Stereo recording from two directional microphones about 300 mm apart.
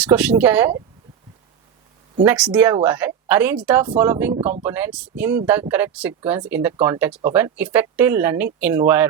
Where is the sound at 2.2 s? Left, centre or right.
Centre.